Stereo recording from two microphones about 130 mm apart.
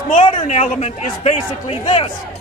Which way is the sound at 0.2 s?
55° left (ahead or behind).